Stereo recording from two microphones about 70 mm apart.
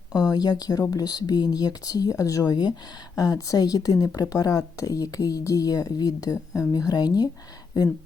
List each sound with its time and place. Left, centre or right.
0.1 s speech: left
3.2 s speech: left
6.8 s speech: left